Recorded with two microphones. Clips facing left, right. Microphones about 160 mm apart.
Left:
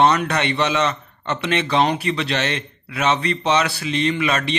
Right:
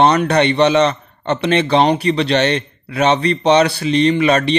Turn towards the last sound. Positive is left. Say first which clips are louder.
# right 7 dB
turn(degrees=-35)  # may be behind; listen again after turning